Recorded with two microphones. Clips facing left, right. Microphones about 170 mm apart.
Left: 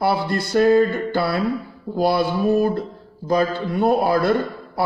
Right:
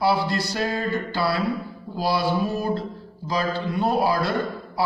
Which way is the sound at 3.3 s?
55° left (ahead or behind).